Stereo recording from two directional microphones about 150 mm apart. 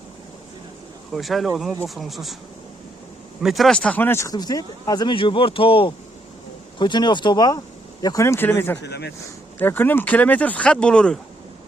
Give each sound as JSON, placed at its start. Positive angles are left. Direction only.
{"t": 1.1, "sound": "speech", "side_deg": 0}
{"t": 3.4, "sound": "speech", "side_deg": 0}